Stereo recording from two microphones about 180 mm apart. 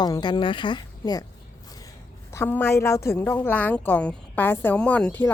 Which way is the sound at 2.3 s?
10° left (ahead or behind).